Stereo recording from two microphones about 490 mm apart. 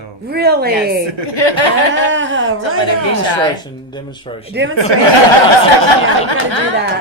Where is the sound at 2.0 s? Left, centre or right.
Right.